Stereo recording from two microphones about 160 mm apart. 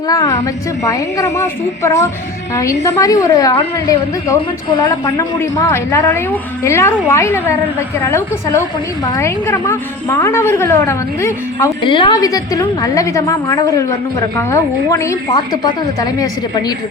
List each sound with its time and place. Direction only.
0.1 s a woman's voice: 20° left (ahead or behind)
5.0 s a woman's voice: 20° left (ahead or behind)
11.8 s a woman's voice: 30° left (ahead or behind)